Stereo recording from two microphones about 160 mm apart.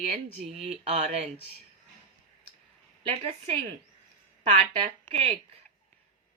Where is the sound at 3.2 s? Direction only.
40° right (ahead or behind).